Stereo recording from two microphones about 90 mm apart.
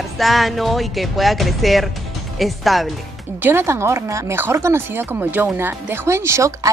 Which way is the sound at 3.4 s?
25° right (ahead or behind).